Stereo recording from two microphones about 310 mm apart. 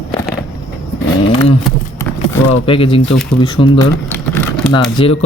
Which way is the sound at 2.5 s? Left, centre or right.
Centre.